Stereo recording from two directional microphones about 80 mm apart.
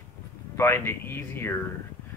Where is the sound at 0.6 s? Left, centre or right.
Left.